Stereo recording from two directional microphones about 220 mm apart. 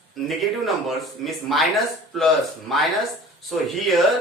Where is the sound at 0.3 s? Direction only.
Centre (ahead or behind).